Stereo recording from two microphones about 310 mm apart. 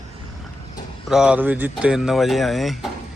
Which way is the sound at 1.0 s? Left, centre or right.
Centre.